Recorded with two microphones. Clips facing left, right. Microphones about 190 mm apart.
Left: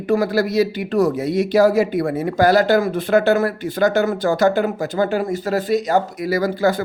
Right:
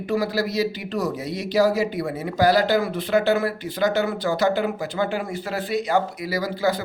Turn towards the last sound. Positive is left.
turn(degrees=50)  # may be behind; listen again after turning